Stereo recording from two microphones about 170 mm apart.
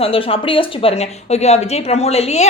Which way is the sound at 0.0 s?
35° left (ahead or behind).